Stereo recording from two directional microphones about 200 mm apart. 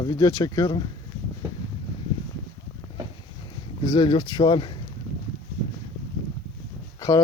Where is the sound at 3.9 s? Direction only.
25° left (ahead or behind).